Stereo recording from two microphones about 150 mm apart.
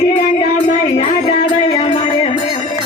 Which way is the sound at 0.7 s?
45° left (ahead or behind).